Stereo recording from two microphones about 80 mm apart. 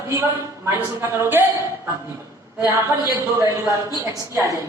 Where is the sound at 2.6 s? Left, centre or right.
Right.